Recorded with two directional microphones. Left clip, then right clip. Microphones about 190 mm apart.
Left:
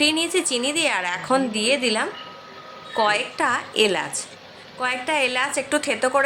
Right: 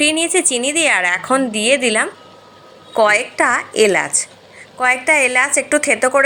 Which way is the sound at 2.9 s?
20° right (ahead or behind).